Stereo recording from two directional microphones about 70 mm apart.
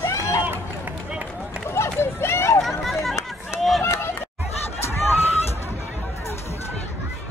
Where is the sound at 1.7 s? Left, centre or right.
Left.